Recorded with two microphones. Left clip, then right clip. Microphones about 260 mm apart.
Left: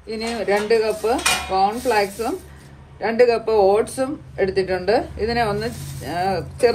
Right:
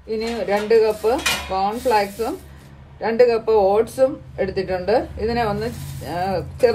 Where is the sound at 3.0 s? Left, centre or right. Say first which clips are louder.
Right 1 dB; left.